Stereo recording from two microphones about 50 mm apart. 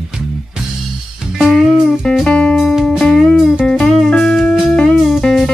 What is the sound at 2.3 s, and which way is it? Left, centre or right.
Music, left.